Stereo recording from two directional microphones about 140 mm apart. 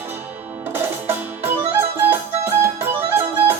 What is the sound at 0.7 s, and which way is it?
Music, 15° right (ahead or behind).